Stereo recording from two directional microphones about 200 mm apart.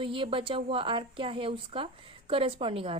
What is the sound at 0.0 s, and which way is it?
A woman's voice, 25° right (ahead or behind).